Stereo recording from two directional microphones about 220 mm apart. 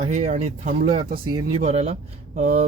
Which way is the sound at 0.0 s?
30° right (ahead or behind).